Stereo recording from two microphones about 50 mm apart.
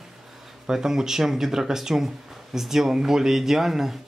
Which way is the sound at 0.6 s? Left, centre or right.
Centre.